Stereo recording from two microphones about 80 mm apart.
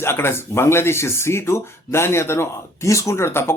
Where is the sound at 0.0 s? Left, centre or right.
Left.